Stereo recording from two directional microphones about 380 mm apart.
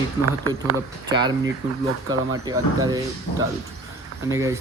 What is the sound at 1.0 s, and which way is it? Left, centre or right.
Speech, centre.